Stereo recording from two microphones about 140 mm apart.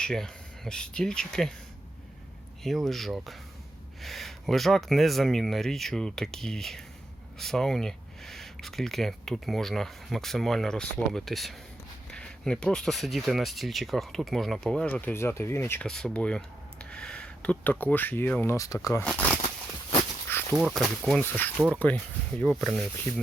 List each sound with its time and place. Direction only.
0.0 s speech: 5° left (ahead or behind)
2.6 s speech: centre (ahead or behind); by 15.9 s 20° left (ahead or behind)
15.9 s speech: 5° left (ahead or behind)
18.5 s speech: 25° left (ahead or behind)
19.0 s speech: 10° left (ahead or behind)
20.5 s speech: 5° right (ahead or behind)
21.2 s speech: 15° left (ahead or behind)